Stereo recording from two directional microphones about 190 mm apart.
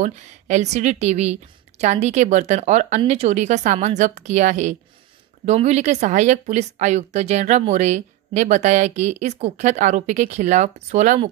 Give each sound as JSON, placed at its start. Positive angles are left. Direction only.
{"t": 0.0, "sound": "speech", "side_deg": -35}